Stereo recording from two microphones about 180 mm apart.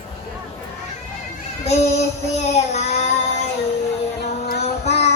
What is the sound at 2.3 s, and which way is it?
Child singing, 40° left (ahead or behind).